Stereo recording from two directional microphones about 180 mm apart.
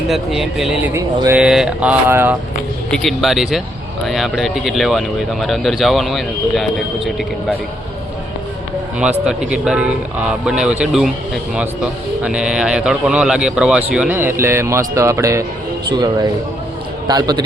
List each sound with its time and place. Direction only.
0.1 s speech: centre (ahead or behind)
0.9 s a man's voice: 15° right (ahead or behind)
2.9 s speech: centre (ahead or behind)
9.0 s speech: 5° right (ahead or behind)
12.2 s a man's voice: 5° right (ahead or behind); by 17.4 s 20° right (ahead or behind)